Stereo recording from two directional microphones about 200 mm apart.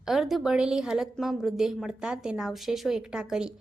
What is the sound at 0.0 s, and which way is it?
A woman's voice, centre (ahead or behind).